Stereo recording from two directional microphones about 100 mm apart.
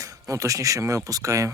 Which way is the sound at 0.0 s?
35° right (ahead or behind).